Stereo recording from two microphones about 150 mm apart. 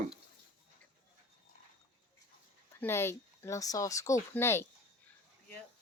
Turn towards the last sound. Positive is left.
turn(degrees=15)  # may be behind; listen again after turning